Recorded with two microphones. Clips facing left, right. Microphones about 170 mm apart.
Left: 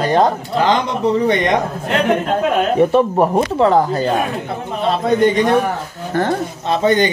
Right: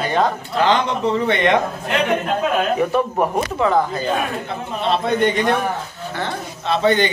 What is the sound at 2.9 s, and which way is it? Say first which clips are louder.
Speech: left 5 dB; 35° left (ahead or behind).